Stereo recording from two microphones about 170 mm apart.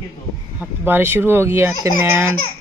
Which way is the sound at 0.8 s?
15° right (ahead or behind).